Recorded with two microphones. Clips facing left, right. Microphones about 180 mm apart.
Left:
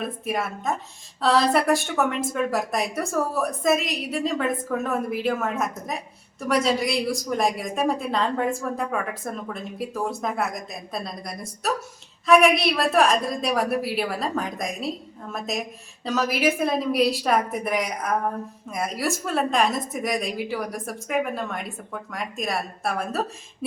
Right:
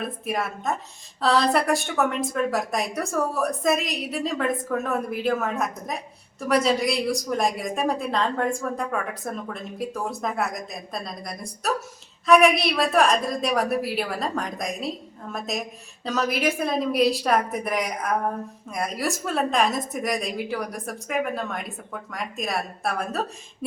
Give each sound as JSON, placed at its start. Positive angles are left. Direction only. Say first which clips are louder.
{"t": 0.0, "sound": "a woman's voice", "louder": "left 1 dB", "side_deg": 0}